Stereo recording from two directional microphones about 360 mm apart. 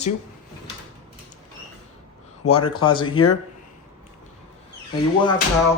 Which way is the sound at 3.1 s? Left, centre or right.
Left.